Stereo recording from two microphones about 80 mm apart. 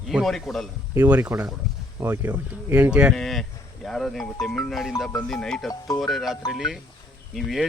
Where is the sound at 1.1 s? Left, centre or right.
Right.